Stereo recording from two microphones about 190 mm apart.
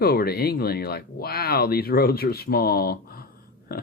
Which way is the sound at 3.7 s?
55° left (ahead or behind).